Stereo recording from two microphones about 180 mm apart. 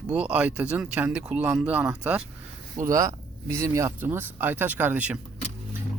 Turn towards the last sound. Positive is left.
turn(degrees=-10)  # may be behind; listen again after turning